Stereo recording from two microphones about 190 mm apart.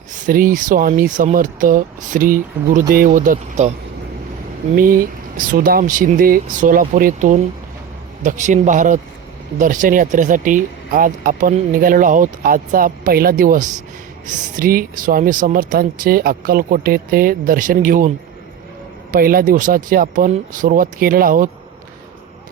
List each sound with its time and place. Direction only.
0.3 s speech: 45° right (ahead or behind)
4.7 s a man's voice: 50° right (ahead or behind)
19.1 s speech: 50° right (ahead or behind)